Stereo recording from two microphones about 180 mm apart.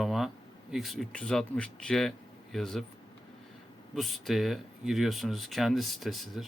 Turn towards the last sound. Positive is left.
turn(degrees=0)  # may be behind; listen again after turning